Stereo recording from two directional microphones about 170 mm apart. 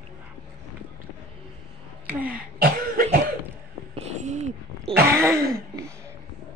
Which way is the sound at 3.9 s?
40° right (ahead or behind).